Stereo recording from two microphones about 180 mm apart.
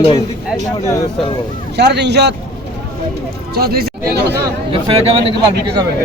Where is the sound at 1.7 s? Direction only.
70° right (ahead or behind).